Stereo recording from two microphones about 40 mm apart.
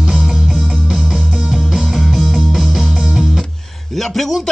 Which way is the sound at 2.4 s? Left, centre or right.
Centre.